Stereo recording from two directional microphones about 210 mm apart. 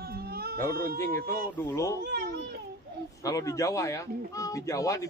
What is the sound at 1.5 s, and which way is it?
Speech, 10° left (ahead or behind).